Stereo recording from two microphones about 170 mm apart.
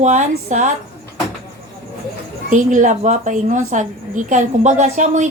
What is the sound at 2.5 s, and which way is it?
A woman's voice, 50° right (ahead or behind).